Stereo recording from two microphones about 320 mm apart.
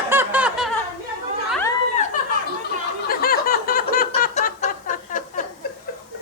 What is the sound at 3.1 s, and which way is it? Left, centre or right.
Snicker, left.